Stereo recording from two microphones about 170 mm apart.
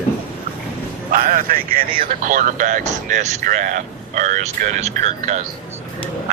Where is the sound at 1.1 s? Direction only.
55° right (ahead or behind).